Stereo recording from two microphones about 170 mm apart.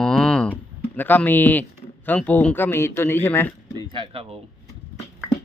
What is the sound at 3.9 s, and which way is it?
Speech, 30° right (ahead or behind).